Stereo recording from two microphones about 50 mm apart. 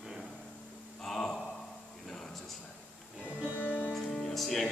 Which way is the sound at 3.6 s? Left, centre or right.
Left.